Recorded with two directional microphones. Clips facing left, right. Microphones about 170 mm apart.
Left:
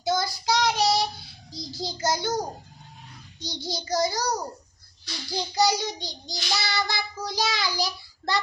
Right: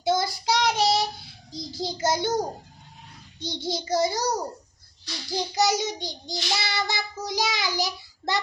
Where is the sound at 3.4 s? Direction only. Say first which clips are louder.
Right 4 dB; 25° right (ahead or behind).